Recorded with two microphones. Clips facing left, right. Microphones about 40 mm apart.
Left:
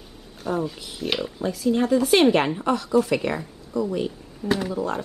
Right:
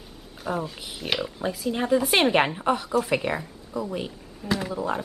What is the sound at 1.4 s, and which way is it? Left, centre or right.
A woman's voice, centre.